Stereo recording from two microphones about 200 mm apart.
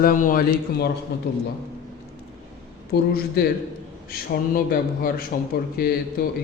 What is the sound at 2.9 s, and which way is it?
A man's voice, 50° left (ahead or behind).